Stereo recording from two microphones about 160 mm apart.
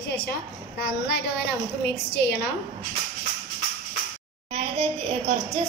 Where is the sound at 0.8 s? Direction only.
90° left.